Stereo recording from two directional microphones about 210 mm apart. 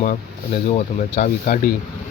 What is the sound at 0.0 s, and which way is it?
Speech, 40° left (ahead or behind).